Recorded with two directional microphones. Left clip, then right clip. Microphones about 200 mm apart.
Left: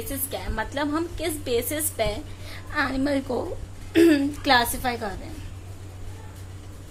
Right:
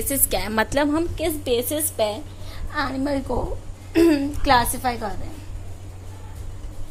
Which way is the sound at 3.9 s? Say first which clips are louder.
Even; centre (ahead or behind).